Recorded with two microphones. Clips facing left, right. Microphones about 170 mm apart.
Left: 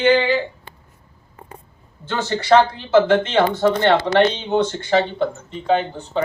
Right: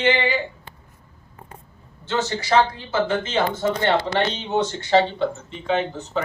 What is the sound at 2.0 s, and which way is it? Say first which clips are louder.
Speech: left 1 dB; 55° left (ahead or behind).